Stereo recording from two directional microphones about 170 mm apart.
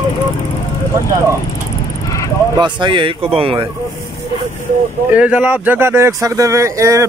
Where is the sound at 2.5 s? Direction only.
25° right (ahead or behind).